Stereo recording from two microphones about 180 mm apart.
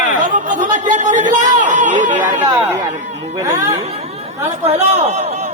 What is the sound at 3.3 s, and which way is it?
Speech, 20° right (ahead or behind).